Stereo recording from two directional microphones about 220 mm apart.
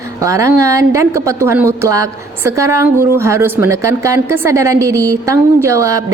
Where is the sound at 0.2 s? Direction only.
15° right (ahead or behind).